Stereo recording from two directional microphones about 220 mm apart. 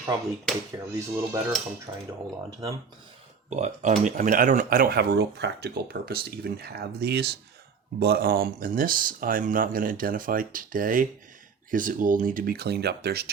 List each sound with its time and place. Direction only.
0.9 s speech: 10° right (ahead or behind)
3.5 s speech: 30° right (ahead or behind); by 13.3 s 45° right (ahead or behind)